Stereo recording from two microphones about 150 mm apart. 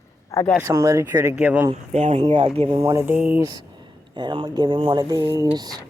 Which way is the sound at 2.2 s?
35° right (ahead or behind).